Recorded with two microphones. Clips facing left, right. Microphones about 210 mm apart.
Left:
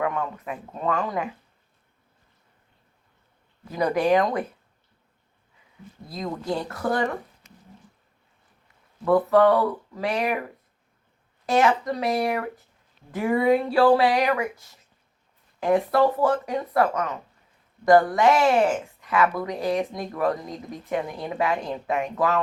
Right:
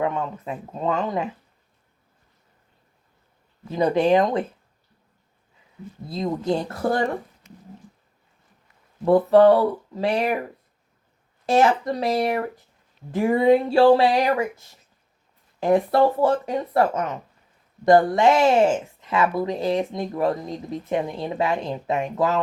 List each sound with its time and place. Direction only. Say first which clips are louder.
0.0 s speech: right 2 dB; 25° right (ahead or behind)
3.7 s speech: right 3 dB; 25° right (ahead or behind)
6.1 s speech: right 5 dB; 25° right (ahead or behind)
9.0 s speech: right 4 dB; 30° right (ahead or behind)
11.4 s speech: right 2 dB; 30° right (ahead or behind)